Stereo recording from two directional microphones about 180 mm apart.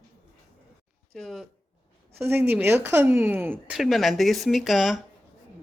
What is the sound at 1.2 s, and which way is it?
Speech, centre (ahead or behind).